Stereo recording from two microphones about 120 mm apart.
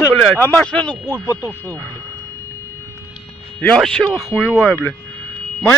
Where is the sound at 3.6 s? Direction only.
5° left (ahead or behind).